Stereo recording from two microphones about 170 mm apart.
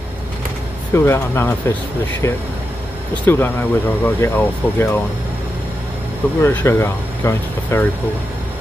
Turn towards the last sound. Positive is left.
turn(degrees=15)  # may be behind; listen again after turning